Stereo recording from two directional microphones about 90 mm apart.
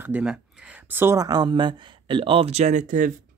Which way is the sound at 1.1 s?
45° right (ahead or behind).